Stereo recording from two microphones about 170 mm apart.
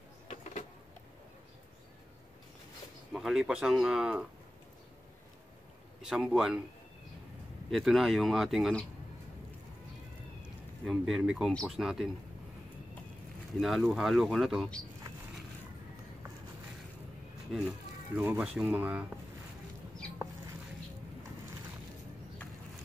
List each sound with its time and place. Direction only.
0.3 s a sound: 40° left (ahead or behind)
3.1 s speech: centre (ahead or behind)
6.0 s speech: 5° right (ahead or behind)
7.7 s speech: centre (ahead or behind)
10.9 s speech: centre (ahead or behind)
13.6 s speech: centre (ahead or behind)
17.5 s speech: 5° right (ahead or behind)